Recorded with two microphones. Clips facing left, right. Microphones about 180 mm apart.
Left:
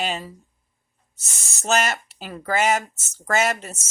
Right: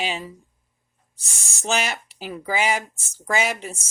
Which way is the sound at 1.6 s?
10° right (ahead or behind).